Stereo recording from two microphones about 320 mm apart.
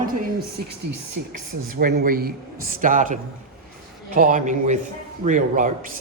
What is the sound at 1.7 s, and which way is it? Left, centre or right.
Speech, right.